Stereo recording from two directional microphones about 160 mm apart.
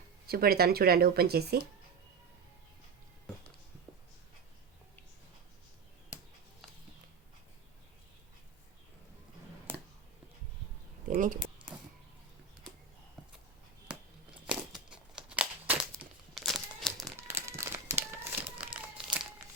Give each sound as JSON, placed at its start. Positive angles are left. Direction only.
{"t": 0.3, "sound": "speech", "side_deg": -70}
{"t": 11.0, "sound": "a sound", "side_deg": -55}
{"t": 13.8, "sound": "crumpling", "side_deg": -5}
{"t": 17.4, "sound": "crumpling", "side_deg": -15}